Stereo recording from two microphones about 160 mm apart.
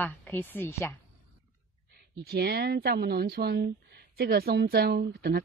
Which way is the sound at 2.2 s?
80° right.